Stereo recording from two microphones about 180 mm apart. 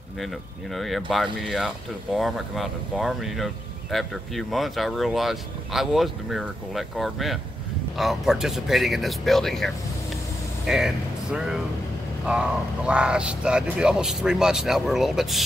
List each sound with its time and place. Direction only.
0.7 s speech: centre (ahead or behind)
10.7 s speech: 5° right (ahead or behind)